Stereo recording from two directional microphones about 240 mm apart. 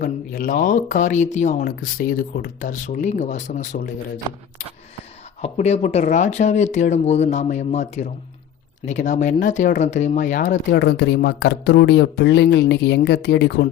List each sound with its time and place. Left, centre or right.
0.0 s speech: left
5.4 s speech: left
10.7 s speech: left